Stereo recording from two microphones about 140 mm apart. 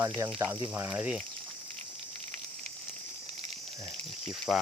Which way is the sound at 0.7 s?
15° right (ahead or behind).